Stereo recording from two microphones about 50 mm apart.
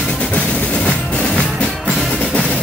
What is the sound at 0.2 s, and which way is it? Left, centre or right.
Music, left.